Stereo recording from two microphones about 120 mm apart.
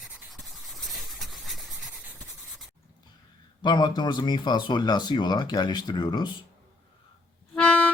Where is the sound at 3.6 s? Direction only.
40° left (ahead or behind).